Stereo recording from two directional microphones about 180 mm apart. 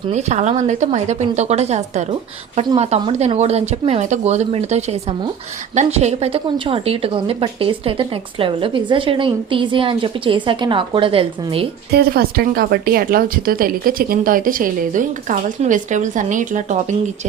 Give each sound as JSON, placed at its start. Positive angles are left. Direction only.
{"t": 0.1, "sound": "a woman's voice", "side_deg": -40}
{"t": 11.9, "sound": "speech", "side_deg": -60}